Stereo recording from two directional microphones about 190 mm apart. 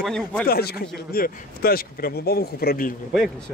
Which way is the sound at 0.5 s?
55° left (ahead or behind).